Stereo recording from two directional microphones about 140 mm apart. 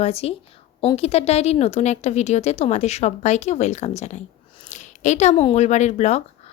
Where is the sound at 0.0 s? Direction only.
45° left (ahead or behind).